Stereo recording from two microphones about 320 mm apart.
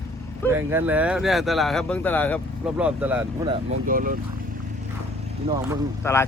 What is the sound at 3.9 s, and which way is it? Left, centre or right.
Speech, right.